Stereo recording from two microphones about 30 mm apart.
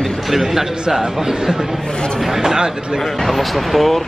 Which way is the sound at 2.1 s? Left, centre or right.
Centre.